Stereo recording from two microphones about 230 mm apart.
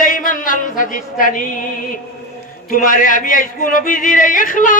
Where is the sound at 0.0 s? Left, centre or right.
Left.